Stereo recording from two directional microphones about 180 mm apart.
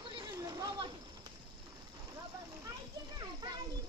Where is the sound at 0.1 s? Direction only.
20° right (ahead or behind).